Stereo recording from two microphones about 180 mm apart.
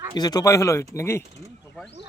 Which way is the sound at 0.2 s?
20° left (ahead or behind).